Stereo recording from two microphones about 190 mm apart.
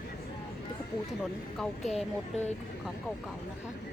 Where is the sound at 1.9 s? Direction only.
35° left (ahead or behind).